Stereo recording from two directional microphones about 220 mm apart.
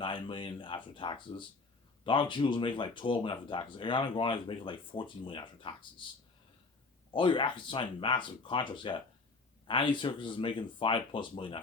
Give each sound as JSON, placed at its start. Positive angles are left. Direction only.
{"t": 0.0, "sound": "speech", "side_deg": 20}
{"t": 7.1, "sound": "speech", "side_deg": 20}